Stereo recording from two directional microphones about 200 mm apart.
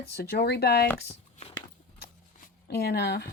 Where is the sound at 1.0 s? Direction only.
30° left (ahead or behind).